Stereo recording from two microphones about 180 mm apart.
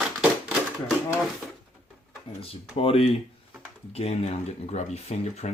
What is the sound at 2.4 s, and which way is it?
Speech, 30° left (ahead or behind).